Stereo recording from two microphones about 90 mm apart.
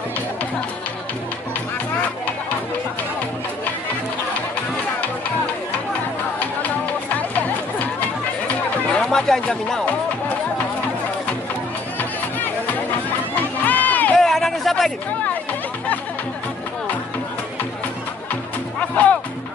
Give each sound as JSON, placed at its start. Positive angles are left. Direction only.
{"t": 7.2, "sound": "music", "side_deg": 15}
{"t": 9.1, "sound": "speech", "side_deg": 5}
{"t": 13.7, "sound": "run", "side_deg": 20}
{"t": 14.1, "sound": "a sound", "side_deg": 5}
{"t": 18.3, "sound": "music", "side_deg": 15}